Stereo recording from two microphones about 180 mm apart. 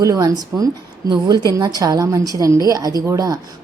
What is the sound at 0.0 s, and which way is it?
A woman's voice, 20° right (ahead or behind).